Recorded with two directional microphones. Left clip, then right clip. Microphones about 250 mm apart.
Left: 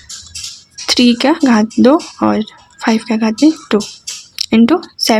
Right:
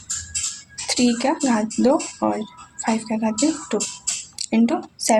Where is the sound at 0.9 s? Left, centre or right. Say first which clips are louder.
Left 9 dB; left.